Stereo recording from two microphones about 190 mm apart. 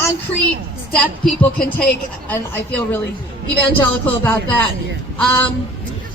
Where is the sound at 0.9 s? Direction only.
10° left (ahead or behind).